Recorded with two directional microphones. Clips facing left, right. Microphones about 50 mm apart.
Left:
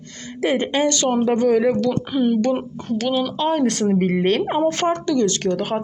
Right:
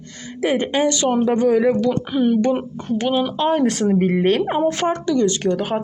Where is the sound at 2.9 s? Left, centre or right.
Centre.